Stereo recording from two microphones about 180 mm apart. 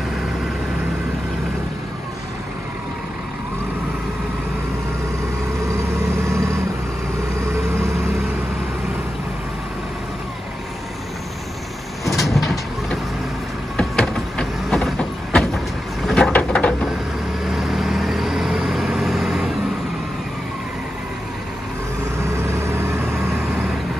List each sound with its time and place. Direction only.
5.7 s vehicle: 15° right (ahead or behind)
12.0 s vehicle: centre (ahead or behind)
22.2 s vehicle: 15° right (ahead or behind)